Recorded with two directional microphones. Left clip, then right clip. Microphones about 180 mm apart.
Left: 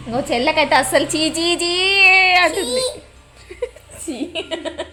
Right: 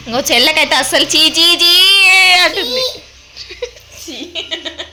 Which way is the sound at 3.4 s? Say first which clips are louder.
Right 2 dB; 15° left (ahead or behind).